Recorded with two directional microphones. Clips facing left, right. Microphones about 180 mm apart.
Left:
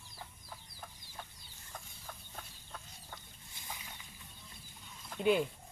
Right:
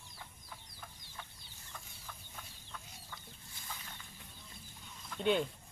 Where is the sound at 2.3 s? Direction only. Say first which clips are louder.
Left 2 dB; 45° left (ahead or behind).